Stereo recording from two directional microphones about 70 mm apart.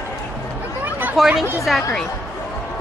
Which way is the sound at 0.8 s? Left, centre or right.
Right.